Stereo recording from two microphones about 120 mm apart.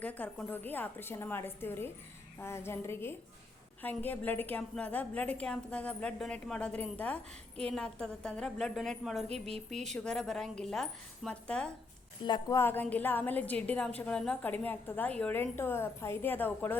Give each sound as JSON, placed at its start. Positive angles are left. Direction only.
{"t": 0.0, "sound": "a woman's voice", "side_deg": 15}
{"t": 12.2, "sound": "a woman's voice", "side_deg": 40}
{"t": 12.5, "sound": "a woman's voice", "side_deg": 15}